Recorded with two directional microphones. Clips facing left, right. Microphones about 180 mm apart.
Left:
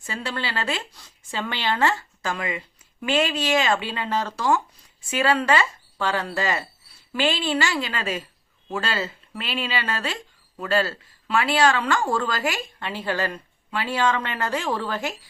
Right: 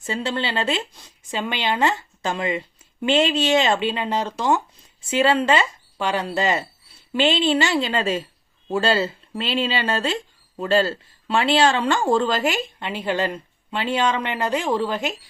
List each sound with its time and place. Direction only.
0.0 s speech: 25° right (ahead or behind)